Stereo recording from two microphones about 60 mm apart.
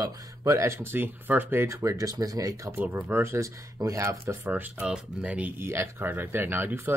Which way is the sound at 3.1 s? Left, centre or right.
Right.